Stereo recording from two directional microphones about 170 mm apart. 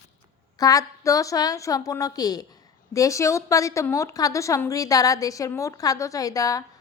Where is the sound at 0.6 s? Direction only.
20° left (ahead or behind).